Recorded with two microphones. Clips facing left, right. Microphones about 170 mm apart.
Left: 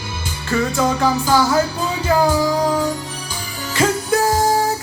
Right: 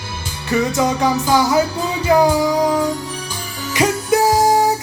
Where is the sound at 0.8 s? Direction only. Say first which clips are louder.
Right 1 dB; 15° right (ahead or behind).